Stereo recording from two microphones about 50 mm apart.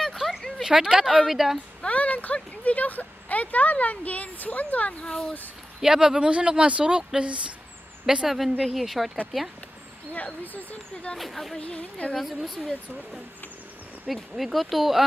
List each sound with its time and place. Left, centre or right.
0.0 s a sound: centre
0.7 s speech: centre
1.0 s speech: centre
1.8 s speech: left
5.0 s speech: centre
5.8 s speech: centre
8.3 s speech: centre
10.1 s speech: left
11.1 s speech: centre
11.6 s a woman's voice: left
12.1 s speech: centre